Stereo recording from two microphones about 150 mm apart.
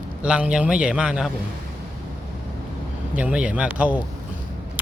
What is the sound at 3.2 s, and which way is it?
Speech, 10° right (ahead or behind).